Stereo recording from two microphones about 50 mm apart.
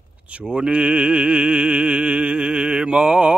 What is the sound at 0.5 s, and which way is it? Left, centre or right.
Music, right.